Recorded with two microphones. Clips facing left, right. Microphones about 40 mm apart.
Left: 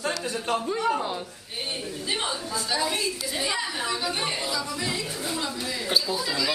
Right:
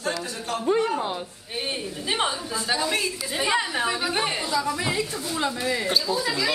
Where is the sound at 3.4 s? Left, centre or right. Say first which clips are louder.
Right 7 dB; right.